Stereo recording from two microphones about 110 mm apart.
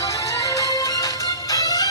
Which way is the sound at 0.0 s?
30° left (ahead or behind).